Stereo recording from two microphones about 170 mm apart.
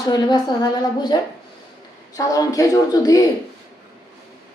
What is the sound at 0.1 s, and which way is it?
A woman's voice, 25° left (ahead or behind).